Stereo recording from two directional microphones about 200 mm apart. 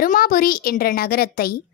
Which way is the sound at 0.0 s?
45° left (ahead or behind).